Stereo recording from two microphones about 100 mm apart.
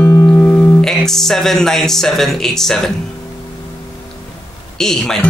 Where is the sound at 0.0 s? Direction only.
25° left (ahead or behind).